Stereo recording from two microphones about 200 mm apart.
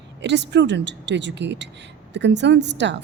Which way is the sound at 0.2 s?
60° right (ahead or behind).